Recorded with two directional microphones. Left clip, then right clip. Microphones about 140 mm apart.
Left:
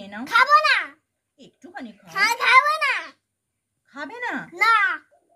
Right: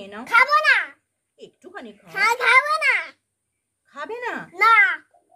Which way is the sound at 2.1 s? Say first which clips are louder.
Right 1 dB; centre (ahead or behind).